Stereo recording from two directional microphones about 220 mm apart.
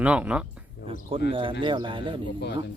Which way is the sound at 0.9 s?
25° right (ahead or behind).